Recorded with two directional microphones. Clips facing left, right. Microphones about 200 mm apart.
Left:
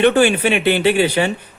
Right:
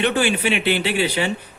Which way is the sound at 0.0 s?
50° left (ahead or behind).